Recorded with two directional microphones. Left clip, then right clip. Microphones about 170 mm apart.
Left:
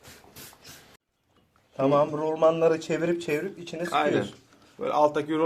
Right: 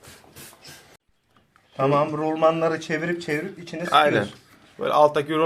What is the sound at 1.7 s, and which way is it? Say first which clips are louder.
A man's voice: right 2 dB; 20° left (ahead or behind).